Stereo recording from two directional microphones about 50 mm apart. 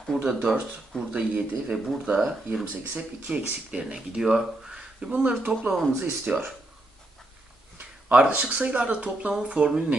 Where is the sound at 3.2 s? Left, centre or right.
Right.